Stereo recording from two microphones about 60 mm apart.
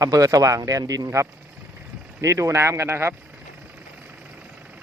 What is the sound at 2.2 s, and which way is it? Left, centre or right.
Speech, right.